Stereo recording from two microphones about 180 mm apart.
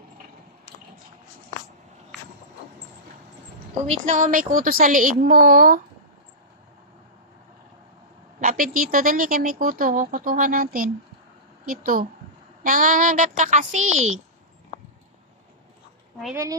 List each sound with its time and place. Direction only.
3.8 s speech: 45° right (ahead or behind)
8.4 s a sound: 50° right (ahead or behind)
8.7 s speech: 50° right (ahead or behind)